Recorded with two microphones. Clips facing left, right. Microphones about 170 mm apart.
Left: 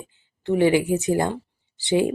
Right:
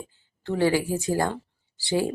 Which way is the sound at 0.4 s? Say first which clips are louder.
Left 4 dB; 20° left (ahead or behind).